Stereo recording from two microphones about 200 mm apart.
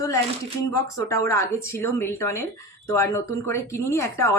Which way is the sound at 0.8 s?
15° left (ahead or behind).